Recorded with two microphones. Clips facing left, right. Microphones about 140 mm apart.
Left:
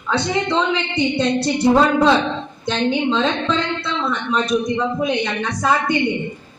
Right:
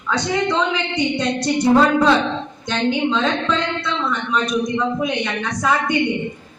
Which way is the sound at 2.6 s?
30° left (ahead or behind).